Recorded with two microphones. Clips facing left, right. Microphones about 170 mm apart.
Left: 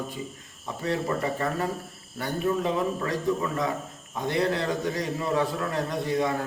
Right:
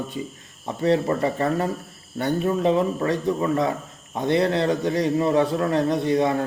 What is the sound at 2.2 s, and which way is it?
A man's voice, 25° right (ahead or behind).